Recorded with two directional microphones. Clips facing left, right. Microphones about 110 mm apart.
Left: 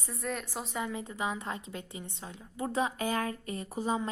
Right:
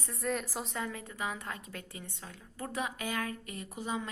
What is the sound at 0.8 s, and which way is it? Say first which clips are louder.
A woman's voice: left 5 dB; 20° left (ahead or behind).